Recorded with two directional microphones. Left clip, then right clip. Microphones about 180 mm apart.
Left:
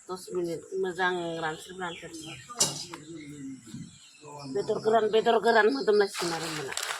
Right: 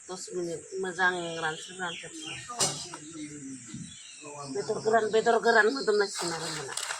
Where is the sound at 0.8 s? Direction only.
40° left (ahead or behind).